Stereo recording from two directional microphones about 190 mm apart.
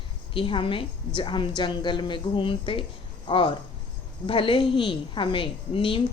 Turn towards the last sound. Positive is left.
turn(degrees=30)  # may be behind; listen again after turning